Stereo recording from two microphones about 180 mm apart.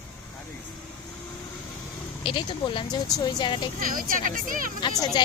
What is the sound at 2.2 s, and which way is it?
Speech, 30° left (ahead or behind).